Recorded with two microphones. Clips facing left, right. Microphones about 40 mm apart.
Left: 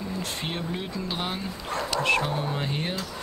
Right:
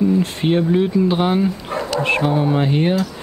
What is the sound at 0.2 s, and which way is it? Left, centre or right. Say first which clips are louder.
Speech: right 14 dB; right.